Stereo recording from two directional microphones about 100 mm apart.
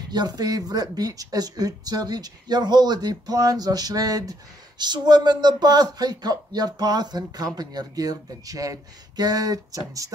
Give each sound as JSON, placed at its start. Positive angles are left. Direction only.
{"t": 0.1, "sound": "speech", "side_deg": -45}